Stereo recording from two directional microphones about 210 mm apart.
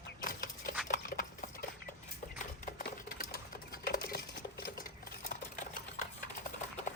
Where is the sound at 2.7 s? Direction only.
45° left (ahead or behind).